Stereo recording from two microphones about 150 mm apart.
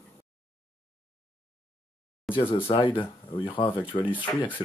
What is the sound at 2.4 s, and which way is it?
Speech, 35° left (ahead or behind).